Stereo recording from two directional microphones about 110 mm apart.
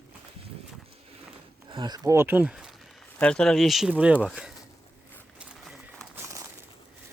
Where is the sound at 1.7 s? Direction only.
40° right (ahead or behind).